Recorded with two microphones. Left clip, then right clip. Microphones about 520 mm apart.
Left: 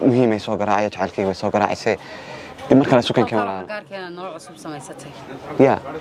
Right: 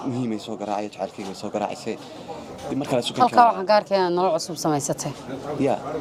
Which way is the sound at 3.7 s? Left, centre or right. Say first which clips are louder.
Right 12 dB; right.